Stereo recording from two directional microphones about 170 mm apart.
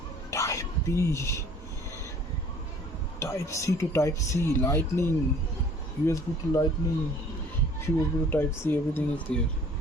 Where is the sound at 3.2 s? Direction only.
15° left (ahead or behind).